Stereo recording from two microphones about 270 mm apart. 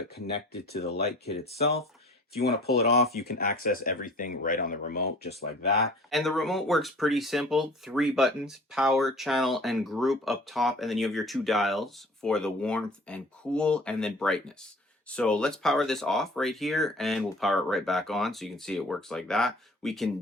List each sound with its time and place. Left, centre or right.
0.5 s speech: left
6.1 s speech: centre